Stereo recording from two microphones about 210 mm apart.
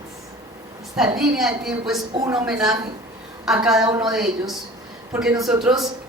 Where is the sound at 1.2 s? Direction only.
Centre (ahead or behind).